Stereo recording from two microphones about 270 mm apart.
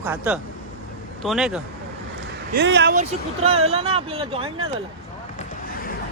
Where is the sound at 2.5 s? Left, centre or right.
Right; by 4.5 s centre.